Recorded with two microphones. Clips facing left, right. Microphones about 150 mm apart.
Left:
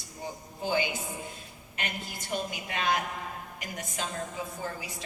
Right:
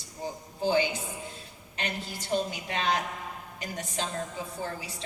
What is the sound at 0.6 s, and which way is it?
A woman's voice, 35° right (ahead or behind).